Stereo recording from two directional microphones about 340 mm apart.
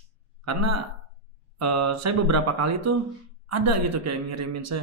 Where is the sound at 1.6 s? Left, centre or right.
Right.